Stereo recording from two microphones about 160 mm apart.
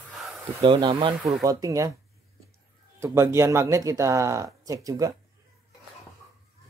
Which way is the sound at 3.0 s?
15° right (ahead or behind).